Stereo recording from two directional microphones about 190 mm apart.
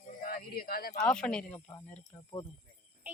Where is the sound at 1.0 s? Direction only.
5° left (ahead or behind).